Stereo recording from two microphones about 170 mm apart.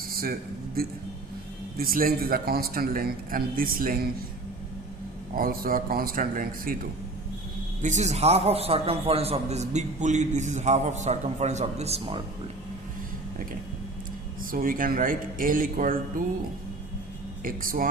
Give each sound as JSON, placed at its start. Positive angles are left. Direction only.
{"t": 0.1, "sound": "a sound", "side_deg": -60}
{"t": 0.8, "sound": "a man's voice", "side_deg": -60}
{"t": 5.3, "sound": "a man's voice", "side_deg": -60}
{"t": 7.8, "sound": "a man's voice", "side_deg": -45}
{"t": 14.5, "sound": "a man's voice", "side_deg": -55}
{"t": 17.4, "sound": "a man's voice", "side_deg": -55}